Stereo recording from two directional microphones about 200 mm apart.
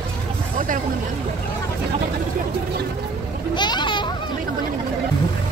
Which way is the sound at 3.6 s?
20° left (ahead or behind).